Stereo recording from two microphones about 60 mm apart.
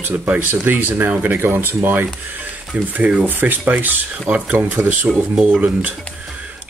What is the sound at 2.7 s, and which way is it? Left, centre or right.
Speech, right.